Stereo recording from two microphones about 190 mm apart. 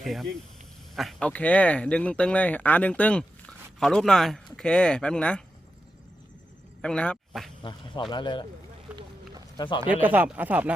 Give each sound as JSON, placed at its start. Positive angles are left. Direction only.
{"t": 0.0, "sound": "speech", "side_deg": 0}
{"t": 6.8, "sound": "speech", "side_deg": 5}
{"t": 7.6, "sound": "speech", "side_deg": 25}
{"t": 8.9, "sound": "run", "side_deg": -5}
{"t": 9.6, "sound": "speech", "side_deg": 25}
{"t": 9.8, "sound": "speech", "side_deg": -10}